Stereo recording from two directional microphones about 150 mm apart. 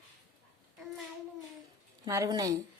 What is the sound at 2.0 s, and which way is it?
Speech, 25° right (ahead or behind).